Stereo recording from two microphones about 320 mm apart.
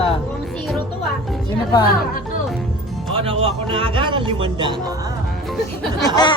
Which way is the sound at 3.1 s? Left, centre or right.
Centre.